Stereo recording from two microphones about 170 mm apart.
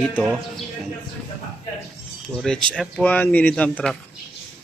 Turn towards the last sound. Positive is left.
turn(degrees=5)  # may be behind; listen again after turning